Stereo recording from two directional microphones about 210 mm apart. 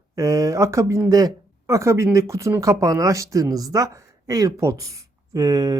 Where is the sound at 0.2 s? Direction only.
15° right (ahead or behind).